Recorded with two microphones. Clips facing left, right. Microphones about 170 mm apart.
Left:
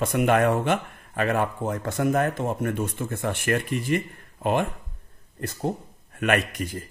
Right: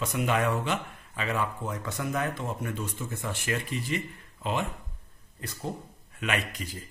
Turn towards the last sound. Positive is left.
turn(degrees=55)  # may be behind; listen again after turning